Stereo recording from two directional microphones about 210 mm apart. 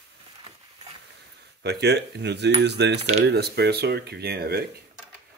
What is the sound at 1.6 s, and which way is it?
Speech, 50° right (ahead or behind).